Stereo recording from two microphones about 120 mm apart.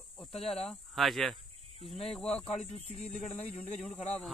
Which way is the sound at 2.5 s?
75° left (ahead or behind).